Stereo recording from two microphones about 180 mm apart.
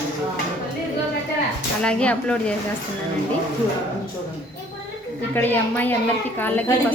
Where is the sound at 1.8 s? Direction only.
5° left (ahead or behind).